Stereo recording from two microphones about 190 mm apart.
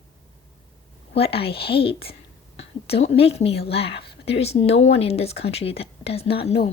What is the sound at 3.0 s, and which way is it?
Speech, 30° left (ahead or behind).